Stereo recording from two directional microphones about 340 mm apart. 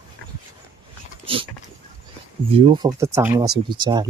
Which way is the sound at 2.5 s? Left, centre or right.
Centre.